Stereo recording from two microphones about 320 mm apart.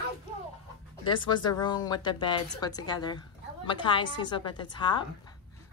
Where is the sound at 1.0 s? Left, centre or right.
Centre.